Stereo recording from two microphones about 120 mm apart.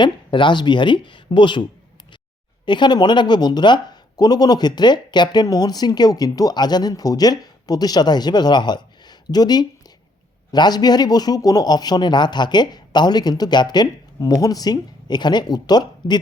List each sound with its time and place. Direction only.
0.0 s speech: 40° left (ahead or behind)
2.6 s speech: 40° left (ahead or behind)